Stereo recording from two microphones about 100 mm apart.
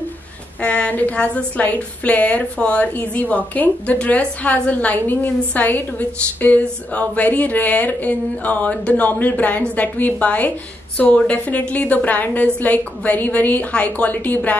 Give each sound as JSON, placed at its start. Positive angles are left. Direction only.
{"t": 0.6, "sound": "a woman's voice", "side_deg": 15}